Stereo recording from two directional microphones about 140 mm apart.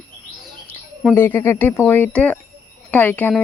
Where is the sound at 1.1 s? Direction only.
15° left (ahead or behind).